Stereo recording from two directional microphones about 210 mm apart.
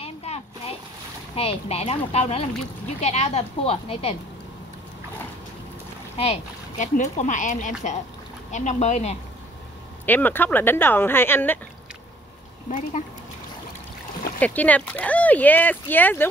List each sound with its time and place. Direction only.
0.0 s a sound: 30° left (ahead or behind)
1.3 s speech: 30° left (ahead or behind)
6.1 s speech: 30° left (ahead or behind)
10.0 s speech: 10° left (ahead or behind)
12.6 s speech: 35° left (ahead or behind)
14.4 s speech: 10° left (ahead or behind)